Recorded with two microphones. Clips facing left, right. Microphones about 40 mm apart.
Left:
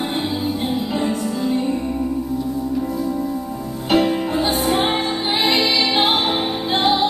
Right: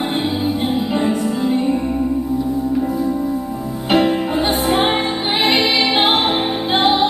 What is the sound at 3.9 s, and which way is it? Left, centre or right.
Music, centre.